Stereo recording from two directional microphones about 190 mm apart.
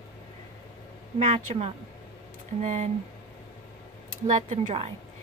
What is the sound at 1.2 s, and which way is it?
Speech, 35° right (ahead or behind).